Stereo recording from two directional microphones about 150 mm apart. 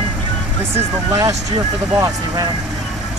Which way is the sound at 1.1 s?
20° right (ahead or behind).